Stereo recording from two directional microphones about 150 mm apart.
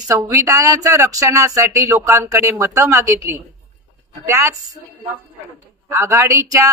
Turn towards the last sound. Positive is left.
turn(degrees=-20)  # may be behind; listen again after turning